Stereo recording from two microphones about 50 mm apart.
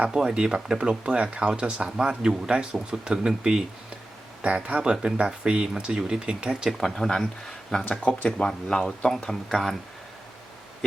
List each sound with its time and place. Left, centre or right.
0.0 s speech: centre
6.8 s speech: centre
7.9 s speech: left
8.4 s speech: centre